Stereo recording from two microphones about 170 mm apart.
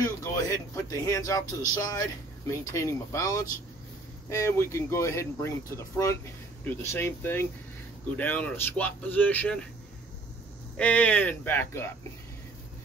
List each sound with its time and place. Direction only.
0.2 s speech: 20° left (ahead or behind)
10.8 s speech: 10° left (ahead or behind)